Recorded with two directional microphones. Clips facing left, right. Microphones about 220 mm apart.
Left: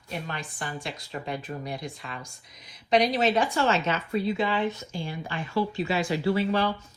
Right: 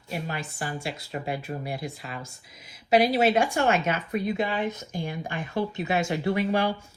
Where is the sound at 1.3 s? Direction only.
5° right (ahead or behind).